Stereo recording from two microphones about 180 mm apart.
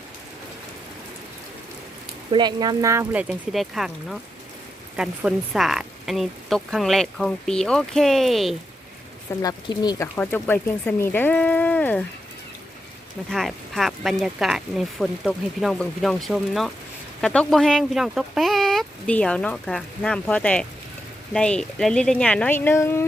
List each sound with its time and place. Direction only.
2.3 s a woman's voice: 25° right (ahead or behind); by 8.5 s centre (ahead or behind)
9.4 s speech: 20° left (ahead or behind)
10.2 s speech: 10° left (ahead or behind)
13.3 s a woman's voice: centre (ahead or behind)